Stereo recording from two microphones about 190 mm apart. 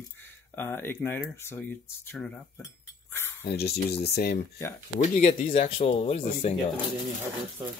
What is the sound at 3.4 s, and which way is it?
Speech, 55° left (ahead or behind).